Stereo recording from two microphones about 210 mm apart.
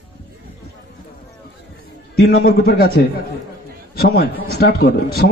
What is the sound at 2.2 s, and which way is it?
A man's voice, 50° left (ahead or behind).